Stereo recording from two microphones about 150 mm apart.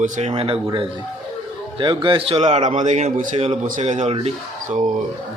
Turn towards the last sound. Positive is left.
turn(degrees=-55)  # may be behind; listen again after turning